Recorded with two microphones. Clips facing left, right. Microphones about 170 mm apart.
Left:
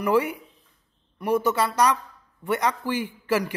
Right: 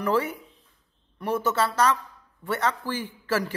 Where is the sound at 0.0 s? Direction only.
15° left (ahead or behind).